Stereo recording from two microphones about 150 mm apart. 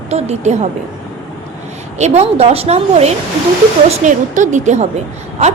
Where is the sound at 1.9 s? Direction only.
50° right (ahead or behind).